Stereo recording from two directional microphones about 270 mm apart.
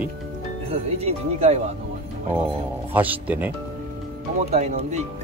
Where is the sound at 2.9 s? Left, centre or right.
Centre.